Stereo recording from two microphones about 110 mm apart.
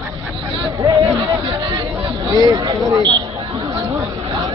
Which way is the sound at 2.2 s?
35° right (ahead or behind).